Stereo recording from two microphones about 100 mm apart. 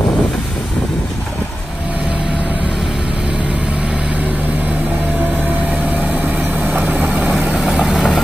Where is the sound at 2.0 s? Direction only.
10° right (ahead or behind).